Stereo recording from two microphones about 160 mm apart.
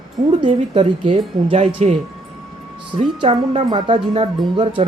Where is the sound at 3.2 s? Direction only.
35° right (ahead or behind).